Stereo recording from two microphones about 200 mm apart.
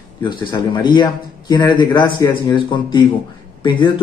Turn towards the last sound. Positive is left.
turn(degrees=25)  # may be behind; listen again after turning